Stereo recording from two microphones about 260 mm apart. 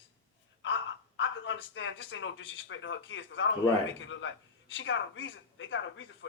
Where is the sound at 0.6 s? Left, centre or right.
Left.